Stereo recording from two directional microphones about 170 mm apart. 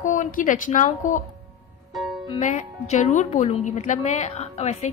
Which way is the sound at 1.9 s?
Centre (ahead or behind).